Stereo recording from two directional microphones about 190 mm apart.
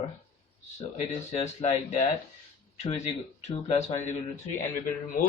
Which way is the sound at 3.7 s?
35° left (ahead or behind).